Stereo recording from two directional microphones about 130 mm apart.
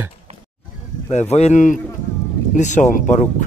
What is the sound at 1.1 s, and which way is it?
Speech, 55° left (ahead or behind).